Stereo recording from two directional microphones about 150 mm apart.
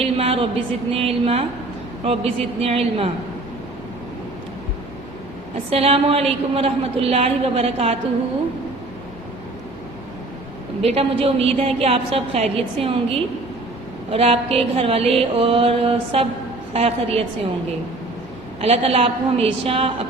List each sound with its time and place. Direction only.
0.0 s a sound: 40° right (ahead or behind)
0.9 s a woman's voice: 40° right (ahead or behind)
5.7 s a woman's voice: 40° right (ahead or behind)
10.8 s a woman's voice: 40° right (ahead or behind)
18.6 s a woman's voice: 40° right (ahead or behind)